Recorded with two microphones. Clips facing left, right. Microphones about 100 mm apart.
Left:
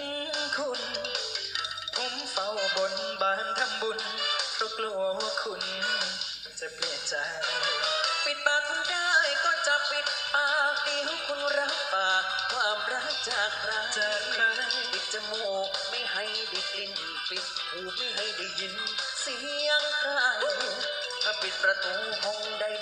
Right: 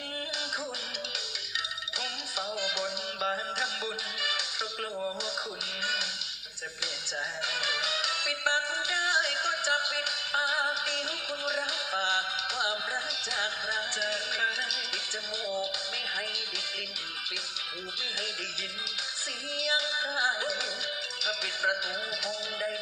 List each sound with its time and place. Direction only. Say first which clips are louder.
2.6 s music: left 6 dB; 50° left (ahead or behind)
7.4 s music: left 3 dB; 45° left (ahead or behind)
13.9 s music: left 3 dB; 45° left (ahead or behind)
19.5 s music: left 4 dB; 45° left (ahead or behind)